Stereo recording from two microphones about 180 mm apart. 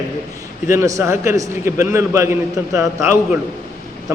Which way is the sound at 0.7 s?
15° right (ahead or behind).